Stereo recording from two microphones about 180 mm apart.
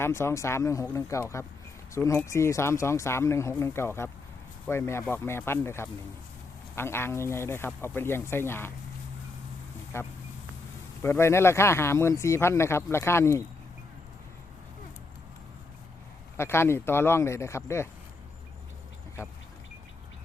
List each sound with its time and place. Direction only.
0.0 s speech: 15° left (ahead or behind)
9.9 s speech: 15° left (ahead or behind)
16.4 s speech: 15° left (ahead or behind)